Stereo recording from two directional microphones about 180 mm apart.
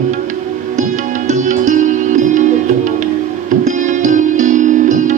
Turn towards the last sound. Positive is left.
turn(degrees=-45)  # may be behind; listen again after turning